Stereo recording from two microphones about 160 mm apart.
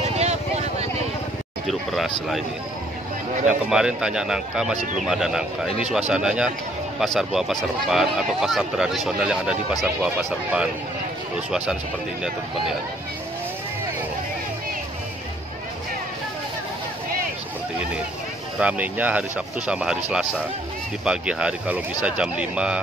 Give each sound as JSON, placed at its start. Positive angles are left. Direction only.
{"t": 0.2, "sound": "vehicle", "side_deg": -45}
{"t": 1.7, "sound": "speech", "side_deg": 0}
{"t": 3.4, "sound": "speech", "side_deg": -5}
{"t": 18.6, "sound": "speech", "side_deg": -10}